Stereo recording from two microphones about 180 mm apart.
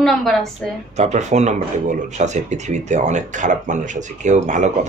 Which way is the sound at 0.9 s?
40° right (ahead or behind).